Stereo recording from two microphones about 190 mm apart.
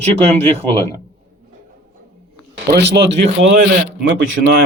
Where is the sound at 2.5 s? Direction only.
60° right (ahead or behind).